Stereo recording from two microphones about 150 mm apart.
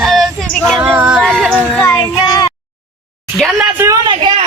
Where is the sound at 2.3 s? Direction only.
25° left (ahead or behind).